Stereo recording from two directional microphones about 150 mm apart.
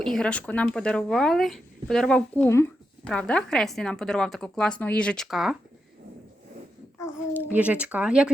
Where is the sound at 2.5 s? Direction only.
15° left (ahead or behind).